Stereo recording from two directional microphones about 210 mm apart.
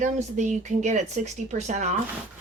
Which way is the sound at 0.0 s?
35° right (ahead or behind).